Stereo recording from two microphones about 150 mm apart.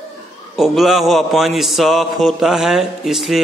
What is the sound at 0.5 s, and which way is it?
A man's voice, centre (ahead or behind).